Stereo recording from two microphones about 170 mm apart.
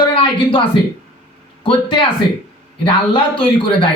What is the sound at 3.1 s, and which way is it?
Speech, 30° left (ahead or behind).